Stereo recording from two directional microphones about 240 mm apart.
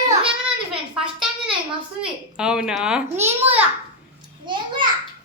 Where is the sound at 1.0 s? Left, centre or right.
Centre.